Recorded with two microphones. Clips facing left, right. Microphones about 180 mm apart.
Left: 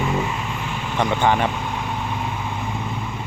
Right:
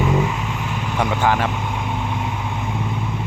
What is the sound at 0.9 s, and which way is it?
Vehicle, 5° right (ahead or behind).